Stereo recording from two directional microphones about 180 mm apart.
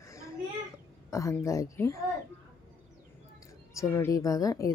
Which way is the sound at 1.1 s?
15° left (ahead or behind).